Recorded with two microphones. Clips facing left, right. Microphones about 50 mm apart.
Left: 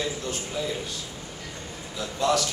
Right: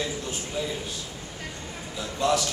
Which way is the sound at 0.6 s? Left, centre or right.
Centre.